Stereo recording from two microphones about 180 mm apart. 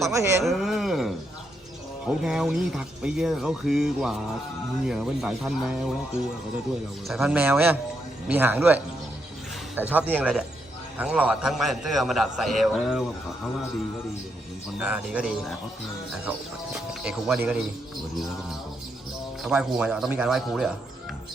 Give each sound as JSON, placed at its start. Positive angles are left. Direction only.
{"t": 0.1, "sound": "a man's voice", "side_deg": -15}
{"t": 0.4, "sound": "speech", "side_deg": 0}
{"t": 7.1, "sound": "a man's voice", "side_deg": -5}
{"t": 14.8, "sound": "speech", "side_deg": -5}
{"t": 16.7, "sound": "speech", "side_deg": -5}
{"t": 19.4, "sound": "speech", "side_deg": -5}